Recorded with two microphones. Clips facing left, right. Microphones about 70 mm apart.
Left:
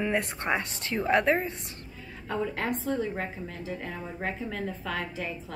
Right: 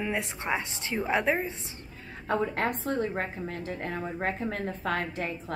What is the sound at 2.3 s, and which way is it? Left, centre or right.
A woman's voice, right.